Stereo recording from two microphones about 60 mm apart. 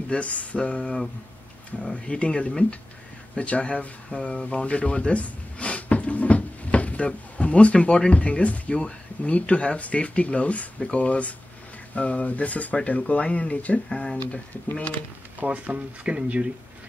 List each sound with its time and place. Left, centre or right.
0.1 s speech: left
15.4 s speech: right